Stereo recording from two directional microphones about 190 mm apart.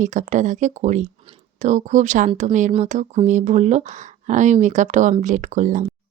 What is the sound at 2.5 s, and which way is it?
Speech, 40° right (ahead or behind).